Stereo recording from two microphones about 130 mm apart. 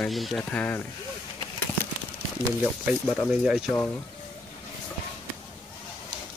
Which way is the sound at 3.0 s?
5° right (ahead or behind).